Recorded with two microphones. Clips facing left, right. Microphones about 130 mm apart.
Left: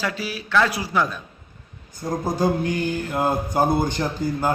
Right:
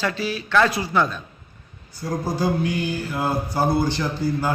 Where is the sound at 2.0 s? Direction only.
20° left (ahead or behind).